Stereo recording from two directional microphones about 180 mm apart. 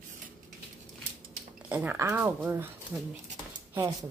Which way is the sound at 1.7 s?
10° right (ahead or behind).